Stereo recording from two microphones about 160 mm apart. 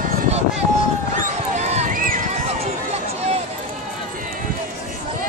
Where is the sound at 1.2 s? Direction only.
50° right (ahead or behind).